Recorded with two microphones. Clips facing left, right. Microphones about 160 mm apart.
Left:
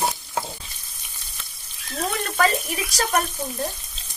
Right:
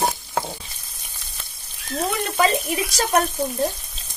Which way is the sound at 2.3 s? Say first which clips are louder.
Right 2 dB; 20° right (ahead or behind).